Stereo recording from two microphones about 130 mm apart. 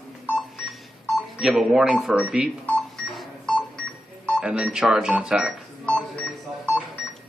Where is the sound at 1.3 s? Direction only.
5° right (ahead or behind).